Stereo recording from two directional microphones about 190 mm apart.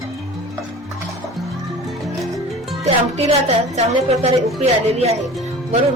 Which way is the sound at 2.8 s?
35° right (ahead or behind).